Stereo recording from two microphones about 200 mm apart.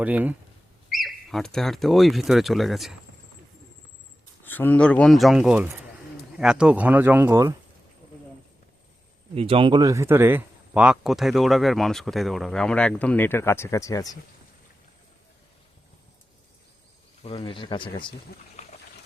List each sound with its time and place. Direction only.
0.0 s speech: 10° right (ahead or behind)
4.4 s speech: 10° left (ahead or behind); by 7.5 s 10° right (ahead or behind)
9.3 s speech: 30° right (ahead or behind); by 14.1 s 15° left (ahead or behind)
17.2 s speech: 25° left (ahead or behind)
18.3 s speech: 50° left (ahead or behind)